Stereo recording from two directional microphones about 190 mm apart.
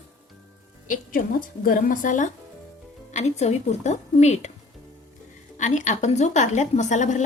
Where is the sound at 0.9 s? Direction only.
45° left (ahead or behind).